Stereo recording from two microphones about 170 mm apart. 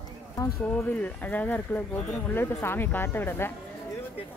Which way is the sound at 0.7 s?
10° left (ahead or behind).